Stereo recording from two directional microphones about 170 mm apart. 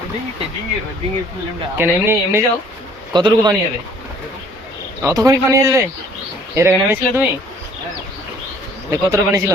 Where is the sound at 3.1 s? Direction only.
25° right (ahead or behind).